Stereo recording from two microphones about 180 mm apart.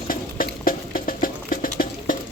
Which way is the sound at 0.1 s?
55° left (ahead or behind).